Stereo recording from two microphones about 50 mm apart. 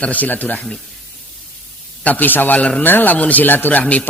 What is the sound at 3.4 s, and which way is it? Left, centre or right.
Speech, left.